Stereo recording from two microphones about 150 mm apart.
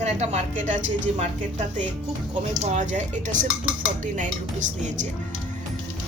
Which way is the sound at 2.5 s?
50° right (ahead or behind).